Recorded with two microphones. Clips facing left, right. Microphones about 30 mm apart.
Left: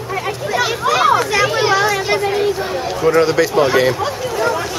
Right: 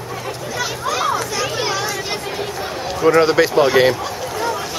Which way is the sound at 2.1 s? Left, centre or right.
Centre.